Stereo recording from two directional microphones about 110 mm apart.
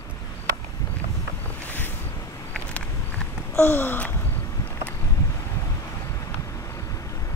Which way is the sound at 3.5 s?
20° left (ahead or behind).